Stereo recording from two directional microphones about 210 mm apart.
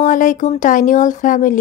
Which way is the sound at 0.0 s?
40° left (ahead or behind).